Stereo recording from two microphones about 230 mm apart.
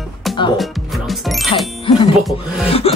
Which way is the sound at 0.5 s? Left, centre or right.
Centre.